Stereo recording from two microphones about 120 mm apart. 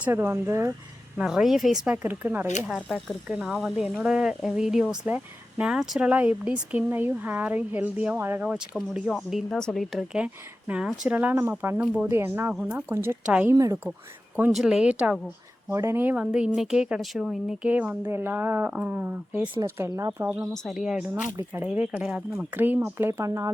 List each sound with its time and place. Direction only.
0.0 s speech: 20° right (ahead or behind)
1.2 s speech: 5° right (ahead or behind)
2.0 s speech: 20° right (ahead or behind)
13.5 s speech: 25° right (ahead or behind)
14.5 s speech: 5° right (ahead or behind)
15.7 s speech: 20° right (ahead or behind)
20.5 s speech: centre (ahead or behind); by 23.5 s 25° right (ahead or behind)